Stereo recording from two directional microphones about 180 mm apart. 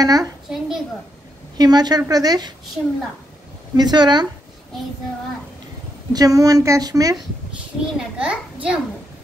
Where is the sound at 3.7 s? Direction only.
25° right (ahead or behind).